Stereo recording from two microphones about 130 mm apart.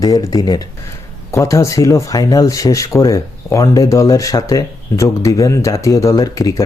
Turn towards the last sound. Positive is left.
turn(degrees=25)  # may be behind; listen again after turning